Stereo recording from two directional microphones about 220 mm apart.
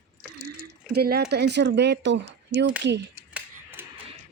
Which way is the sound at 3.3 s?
10° right (ahead or behind).